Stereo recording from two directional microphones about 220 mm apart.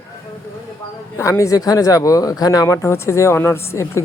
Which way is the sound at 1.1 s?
15° left (ahead or behind).